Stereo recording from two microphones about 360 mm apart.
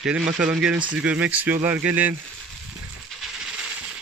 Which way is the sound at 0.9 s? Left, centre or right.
Centre.